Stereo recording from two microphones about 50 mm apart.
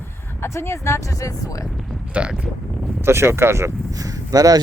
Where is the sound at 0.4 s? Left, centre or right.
Left.